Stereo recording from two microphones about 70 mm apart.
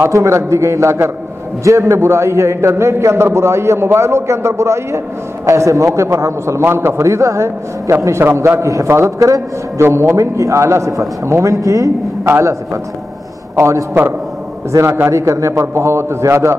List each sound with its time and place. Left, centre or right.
0.0 s a man's voice: right
12.3 s a man's voice: right
14.7 s a man's voice: right